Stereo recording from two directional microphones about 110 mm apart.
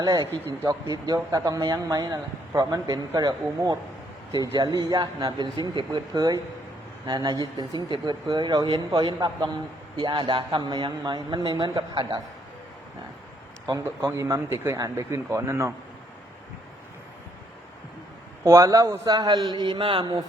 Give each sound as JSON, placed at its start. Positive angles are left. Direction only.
{"t": 0.0, "sound": "a man's voice", "side_deg": -35}
{"t": 13.8, "sound": "speech", "side_deg": -25}
{"t": 18.4, "sound": "a man's voice", "side_deg": -35}